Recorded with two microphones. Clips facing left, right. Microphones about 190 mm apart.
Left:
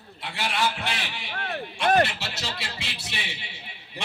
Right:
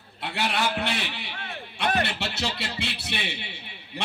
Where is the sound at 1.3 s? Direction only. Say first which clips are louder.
Left 6 dB; 55° left (ahead or behind).